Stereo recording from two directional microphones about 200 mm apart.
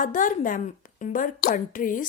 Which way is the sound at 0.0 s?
40° left (ahead or behind).